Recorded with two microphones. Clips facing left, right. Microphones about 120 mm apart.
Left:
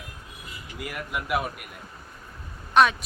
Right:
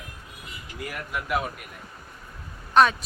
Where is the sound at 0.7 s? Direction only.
5° left (ahead or behind).